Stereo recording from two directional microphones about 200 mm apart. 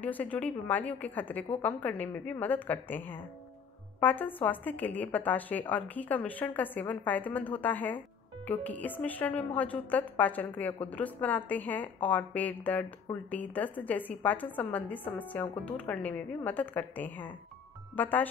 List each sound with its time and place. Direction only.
0.0 s a woman's voice: 10° left (ahead or behind)